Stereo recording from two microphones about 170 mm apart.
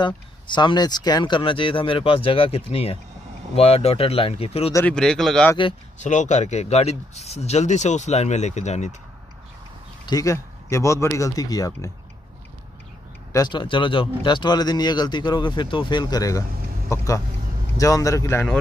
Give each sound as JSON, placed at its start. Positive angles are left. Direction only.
{"t": 0.0, "sound": "speech", "side_deg": 25}
{"t": 4.7, "sound": "speech", "side_deg": 5}
{"t": 5.9, "sound": "speech", "side_deg": 45}
{"t": 10.0, "sound": "speech", "side_deg": 20}
{"t": 13.3, "sound": "speech", "side_deg": 25}